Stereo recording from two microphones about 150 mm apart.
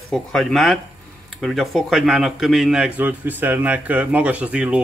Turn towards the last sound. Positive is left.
turn(degrees=-10)  # may be behind; listen again after turning